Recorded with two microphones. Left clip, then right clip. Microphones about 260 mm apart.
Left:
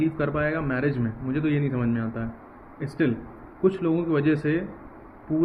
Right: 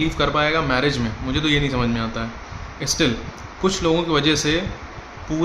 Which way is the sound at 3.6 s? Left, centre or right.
Centre.